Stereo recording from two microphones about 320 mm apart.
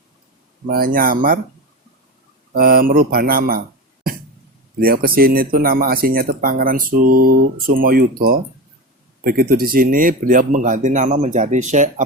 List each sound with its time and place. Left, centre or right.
0.7 s speech: right
2.6 s speech: right
4.8 s speech: right